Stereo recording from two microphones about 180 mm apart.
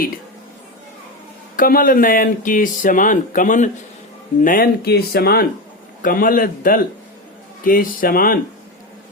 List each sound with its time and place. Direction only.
1.5 s speech: 50° left (ahead or behind)